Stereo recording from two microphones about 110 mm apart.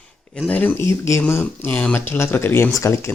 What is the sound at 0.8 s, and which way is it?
Speech, 25° left (ahead or behind).